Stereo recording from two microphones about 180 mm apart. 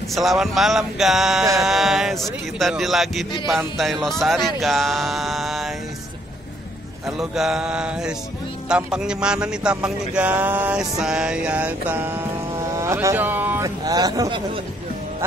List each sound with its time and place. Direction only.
0.1 s music: centre (ahead or behind)
7.2 s music: 5° right (ahead or behind)
12.7 s speech: 15° right (ahead or behind)